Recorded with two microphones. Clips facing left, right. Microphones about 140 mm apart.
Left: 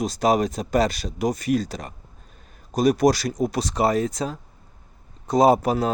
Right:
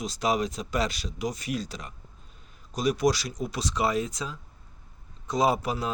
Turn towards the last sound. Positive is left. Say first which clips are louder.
# left 8 dB
turn(degrees=45)  # may be behind; listen again after turning